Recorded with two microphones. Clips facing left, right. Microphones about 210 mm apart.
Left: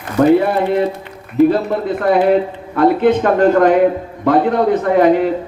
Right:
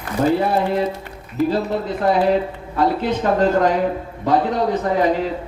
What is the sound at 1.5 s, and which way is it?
A man's voice, 55° left (ahead or behind).